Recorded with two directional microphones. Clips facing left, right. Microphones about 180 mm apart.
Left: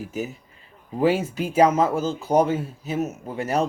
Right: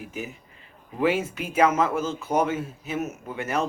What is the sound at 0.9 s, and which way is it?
Speech, 35° left (ahead or behind).